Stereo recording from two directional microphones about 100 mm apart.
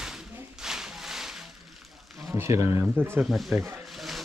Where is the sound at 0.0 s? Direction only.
5° right (ahead or behind).